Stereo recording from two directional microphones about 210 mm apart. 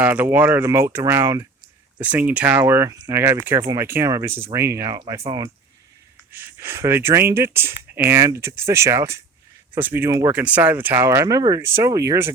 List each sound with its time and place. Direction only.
0.0 s speech: 10° right (ahead or behind)